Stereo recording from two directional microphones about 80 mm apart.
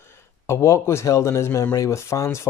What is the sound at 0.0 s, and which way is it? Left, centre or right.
Speech, left.